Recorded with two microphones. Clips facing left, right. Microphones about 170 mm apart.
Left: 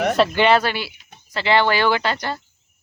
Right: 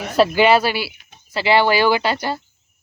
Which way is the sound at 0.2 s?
5° right (ahead or behind).